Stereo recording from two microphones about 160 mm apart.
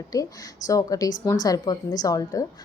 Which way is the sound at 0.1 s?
25° left (ahead or behind).